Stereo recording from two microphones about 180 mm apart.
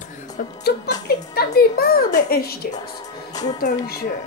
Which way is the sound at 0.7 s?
55° left (ahead or behind).